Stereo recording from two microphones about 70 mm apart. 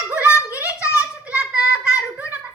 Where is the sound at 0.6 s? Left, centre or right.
Left.